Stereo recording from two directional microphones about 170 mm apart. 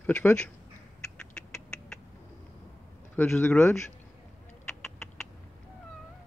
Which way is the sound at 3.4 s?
15° left (ahead or behind).